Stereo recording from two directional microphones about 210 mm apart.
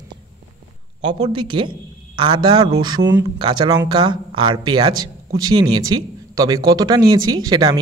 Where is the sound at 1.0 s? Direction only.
20° right (ahead or behind).